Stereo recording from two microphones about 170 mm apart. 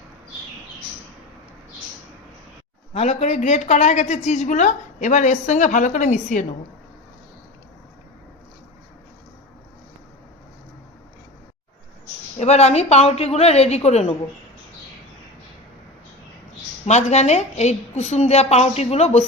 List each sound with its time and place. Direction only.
2.9 s a woman's voice: 40° left (ahead or behind)
12.4 s a woman's voice: 40° left (ahead or behind)
16.8 s a woman's voice: 40° left (ahead or behind)